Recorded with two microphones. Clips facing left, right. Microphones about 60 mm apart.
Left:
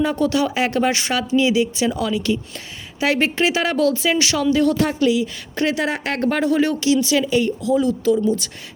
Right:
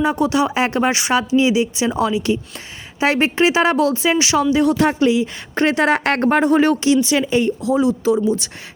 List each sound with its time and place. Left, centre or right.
0.0 s speech: right
4.8 s speech: right
5.9 s speech: right
6.1 s speech: right
7.8 s speech: right